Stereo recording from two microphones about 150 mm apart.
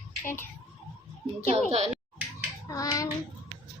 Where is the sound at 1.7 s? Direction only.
45° right (ahead or behind).